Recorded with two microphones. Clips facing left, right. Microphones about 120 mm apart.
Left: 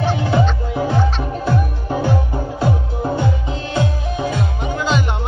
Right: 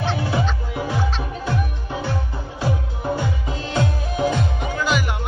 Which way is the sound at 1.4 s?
40° left (ahead or behind).